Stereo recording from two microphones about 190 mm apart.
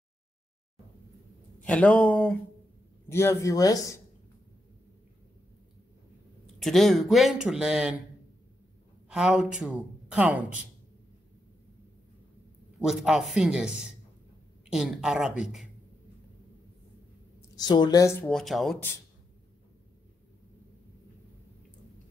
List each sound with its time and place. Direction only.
1.6 s speech: 5° left (ahead or behind)
6.4 s speech: centre (ahead or behind)
9.1 s speech: 5° right (ahead or behind)
12.7 s speech: centre (ahead or behind)
17.6 s speech: 20° left (ahead or behind)
18.2 s speech: centre (ahead or behind)